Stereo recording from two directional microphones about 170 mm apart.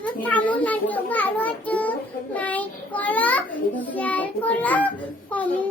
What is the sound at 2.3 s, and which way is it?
Child singing, 10° left (ahead or behind).